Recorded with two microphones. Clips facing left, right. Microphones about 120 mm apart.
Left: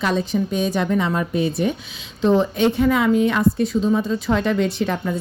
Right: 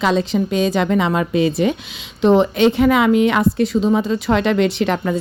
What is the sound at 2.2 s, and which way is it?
A woman's voice, 75° right (ahead or behind).